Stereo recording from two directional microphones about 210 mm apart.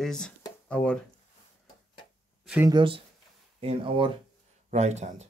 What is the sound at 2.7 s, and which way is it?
Speech, 25° right (ahead or behind).